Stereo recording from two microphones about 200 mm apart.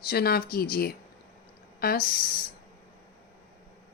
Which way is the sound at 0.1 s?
50° left (ahead or behind).